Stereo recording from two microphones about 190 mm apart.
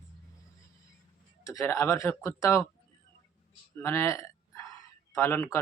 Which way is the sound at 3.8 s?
15° left (ahead or behind).